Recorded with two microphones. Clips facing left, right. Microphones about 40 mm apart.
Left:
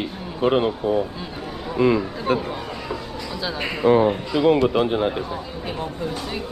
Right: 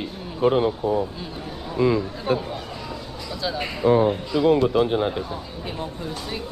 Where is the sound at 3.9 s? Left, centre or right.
Left.